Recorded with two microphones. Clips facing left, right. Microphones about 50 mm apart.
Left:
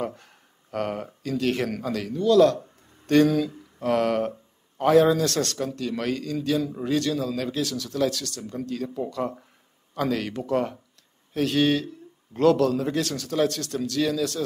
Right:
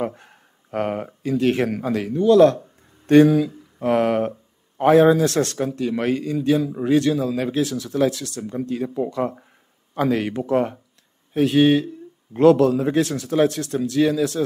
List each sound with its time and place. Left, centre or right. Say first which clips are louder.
0.0 s speech: right 4 dB; right
3.3 s a sound: right 5 dB; centre
4.7 s speech: right 4 dB; right